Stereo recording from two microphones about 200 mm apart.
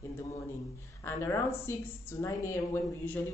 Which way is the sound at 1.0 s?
15° left (ahead or behind).